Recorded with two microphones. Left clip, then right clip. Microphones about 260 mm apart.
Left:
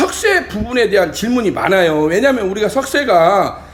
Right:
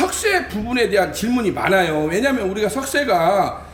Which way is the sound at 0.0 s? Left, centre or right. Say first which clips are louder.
Left 4 dB; centre.